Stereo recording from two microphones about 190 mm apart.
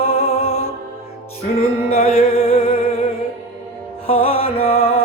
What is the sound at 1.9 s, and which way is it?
Music, 30° left (ahead or behind).